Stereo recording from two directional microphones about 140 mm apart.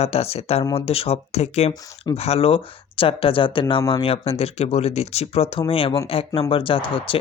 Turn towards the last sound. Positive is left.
turn(degrees=40)  # may be behind; listen again after turning